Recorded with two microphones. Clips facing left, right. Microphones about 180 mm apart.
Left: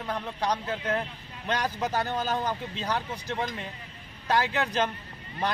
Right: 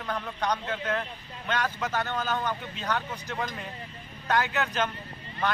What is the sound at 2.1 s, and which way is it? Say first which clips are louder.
Speech: left 1 dB; 30° left (ahead or behind).